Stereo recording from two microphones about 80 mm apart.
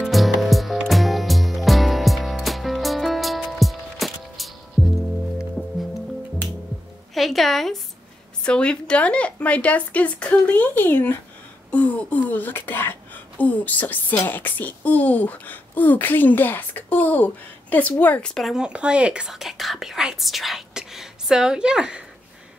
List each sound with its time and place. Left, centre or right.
0.0 s music: centre
7.2 s a woman's voice: centre
8.5 s speech: centre
18.5 s speech: centre